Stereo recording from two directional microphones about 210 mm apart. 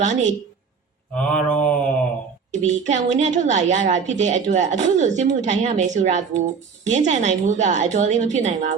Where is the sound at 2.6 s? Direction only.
35° right (ahead or behind).